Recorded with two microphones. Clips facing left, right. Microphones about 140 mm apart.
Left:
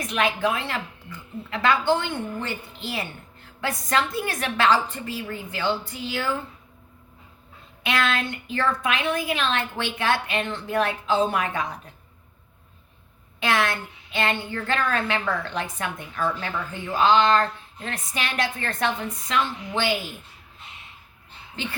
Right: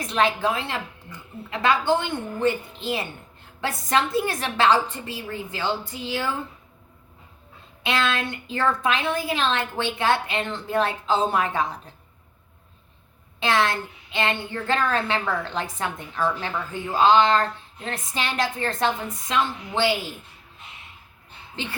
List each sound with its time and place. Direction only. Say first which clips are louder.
0.0 s a woman's voice: right 1 dB; 30° right (ahead or behind)
7.9 s a woman's voice: even; 25° right (ahead or behind)
13.4 s a woman's voice: right 2 dB; 30° right (ahead or behind)